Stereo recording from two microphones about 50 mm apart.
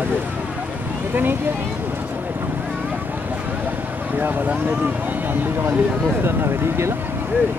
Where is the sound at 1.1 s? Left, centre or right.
Right.